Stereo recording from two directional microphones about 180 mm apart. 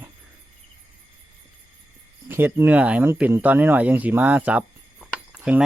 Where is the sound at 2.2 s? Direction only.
10° right (ahead or behind).